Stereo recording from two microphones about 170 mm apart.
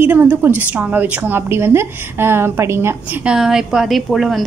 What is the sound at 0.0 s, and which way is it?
A woman's voice, 10° right (ahead or behind).